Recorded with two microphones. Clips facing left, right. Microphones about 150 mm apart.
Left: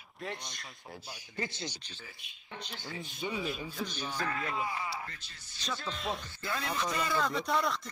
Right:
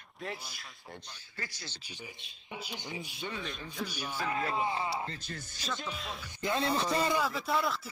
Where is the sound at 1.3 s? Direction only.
20° left (ahead or behind).